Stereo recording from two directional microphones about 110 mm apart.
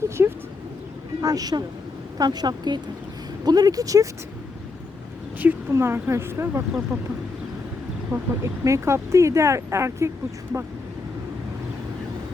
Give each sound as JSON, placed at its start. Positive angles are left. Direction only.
{"t": 0.2, "sound": "a sound", "side_deg": -20}
{"t": 1.2, "sound": "speech", "side_deg": -35}
{"t": 5.4, "sound": "a woman's voice", "side_deg": -15}
{"t": 8.1, "sound": "speech", "side_deg": -25}